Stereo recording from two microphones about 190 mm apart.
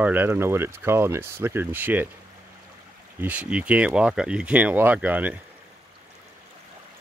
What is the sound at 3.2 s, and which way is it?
Speech, 10° right (ahead or behind).